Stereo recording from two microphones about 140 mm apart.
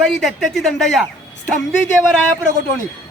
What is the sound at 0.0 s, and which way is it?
Speech, centre (ahead or behind).